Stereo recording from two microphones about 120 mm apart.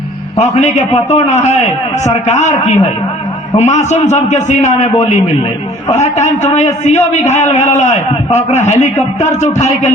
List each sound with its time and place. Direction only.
0.3 s a man's voice: 75° left (ahead or behind)